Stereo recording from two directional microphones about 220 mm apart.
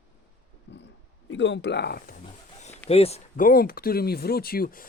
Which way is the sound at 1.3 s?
55° left (ahead or behind).